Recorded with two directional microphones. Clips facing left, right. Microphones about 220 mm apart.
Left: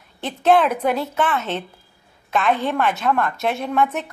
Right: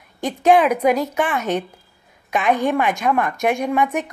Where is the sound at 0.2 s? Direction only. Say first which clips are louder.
Right 2 dB; 10° right (ahead or behind).